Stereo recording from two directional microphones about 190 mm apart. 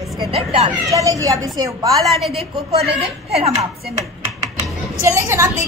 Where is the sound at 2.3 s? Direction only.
30° right (ahead or behind).